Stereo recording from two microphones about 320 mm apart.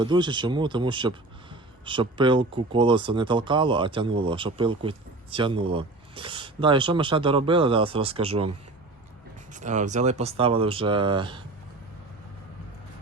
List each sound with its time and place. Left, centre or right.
0.0 s speech: centre
9.5 s speech: right